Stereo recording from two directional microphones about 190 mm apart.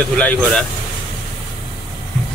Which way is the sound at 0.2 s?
5° left (ahead or behind).